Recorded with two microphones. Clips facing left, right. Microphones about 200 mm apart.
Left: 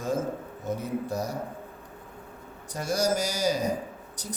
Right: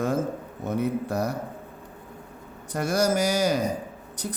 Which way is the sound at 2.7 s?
60° right (ahead or behind).